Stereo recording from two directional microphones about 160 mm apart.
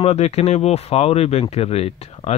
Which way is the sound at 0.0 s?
40° left (ahead or behind).